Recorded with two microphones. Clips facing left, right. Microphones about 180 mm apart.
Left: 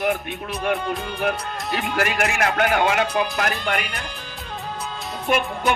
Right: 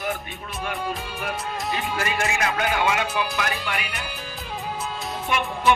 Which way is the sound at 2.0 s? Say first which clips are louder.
Left 5 dB; 70° left (ahead or behind).